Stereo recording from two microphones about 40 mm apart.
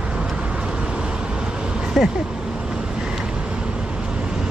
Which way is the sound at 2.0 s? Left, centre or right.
Centre.